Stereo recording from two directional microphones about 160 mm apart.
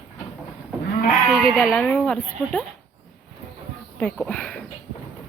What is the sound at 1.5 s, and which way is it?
Speech, 10° left (ahead or behind).